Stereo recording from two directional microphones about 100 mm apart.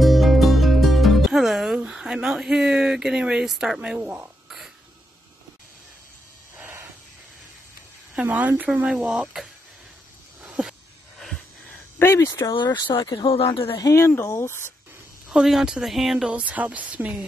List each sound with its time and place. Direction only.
0.0 s music: centre (ahead or behind)
6.5 s a sound: 20° right (ahead or behind)
8.1 s a woman's voice: 15° right (ahead or behind)
10.4 s a sound: 5° right (ahead or behind); by 12.3 s 25° left (ahead or behind)
12.3 s speech: 35° left (ahead or behind)
13.5 s speech: 65° left (ahead or behind)
13.7 s speech: 35° left (ahead or behind)
15.2 s a woman's voice: 5° right (ahead or behind)